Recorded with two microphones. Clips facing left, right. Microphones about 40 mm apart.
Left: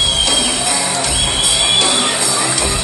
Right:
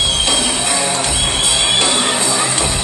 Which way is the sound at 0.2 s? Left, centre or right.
Right.